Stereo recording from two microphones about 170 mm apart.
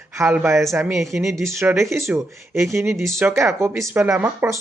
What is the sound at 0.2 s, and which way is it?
Speech, 10° right (ahead or behind).